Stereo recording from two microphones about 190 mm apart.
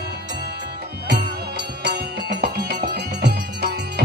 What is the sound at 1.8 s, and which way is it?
Music, 60° right (ahead or behind).